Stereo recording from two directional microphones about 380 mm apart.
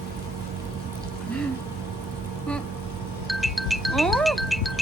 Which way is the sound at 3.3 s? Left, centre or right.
Centre.